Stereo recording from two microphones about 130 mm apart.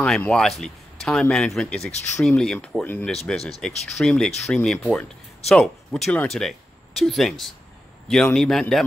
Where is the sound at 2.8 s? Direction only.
15° left (ahead or behind).